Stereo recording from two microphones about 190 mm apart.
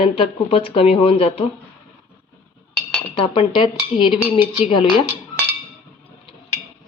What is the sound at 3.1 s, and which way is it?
A woman's voice, 25° left (ahead or behind).